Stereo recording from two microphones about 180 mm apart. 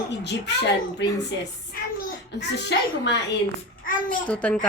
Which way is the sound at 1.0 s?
75° left (ahead or behind).